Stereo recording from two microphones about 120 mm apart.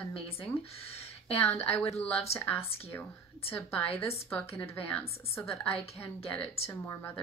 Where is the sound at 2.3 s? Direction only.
15° left (ahead or behind).